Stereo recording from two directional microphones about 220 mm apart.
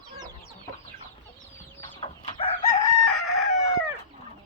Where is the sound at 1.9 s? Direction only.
25° left (ahead or behind).